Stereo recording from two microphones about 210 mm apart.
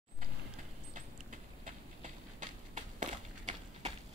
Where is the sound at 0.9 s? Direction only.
35° right (ahead or behind).